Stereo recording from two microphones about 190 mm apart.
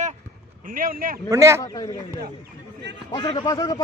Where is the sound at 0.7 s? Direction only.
50° right (ahead or behind).